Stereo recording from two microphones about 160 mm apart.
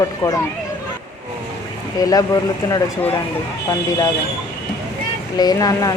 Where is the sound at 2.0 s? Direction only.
20° left (ahead or behind).